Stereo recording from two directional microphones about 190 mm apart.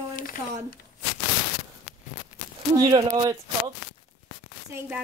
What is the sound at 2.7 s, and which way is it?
Speech, 25° right (ahead or behind).